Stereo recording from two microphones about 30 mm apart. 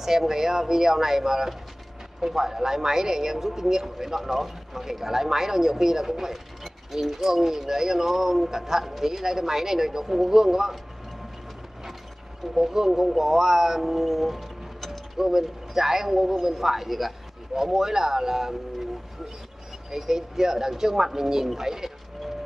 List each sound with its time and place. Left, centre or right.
0.0 s speech: centre
12.5 s speech: centre
19.9 s speech: centre